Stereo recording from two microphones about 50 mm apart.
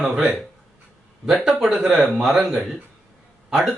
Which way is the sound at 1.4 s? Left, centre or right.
Centre.